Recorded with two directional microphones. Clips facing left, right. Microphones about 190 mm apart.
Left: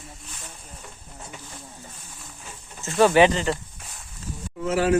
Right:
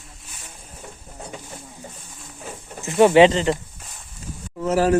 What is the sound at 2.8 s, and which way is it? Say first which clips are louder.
Speech: right 4 dB; 20° right (ahead or behind).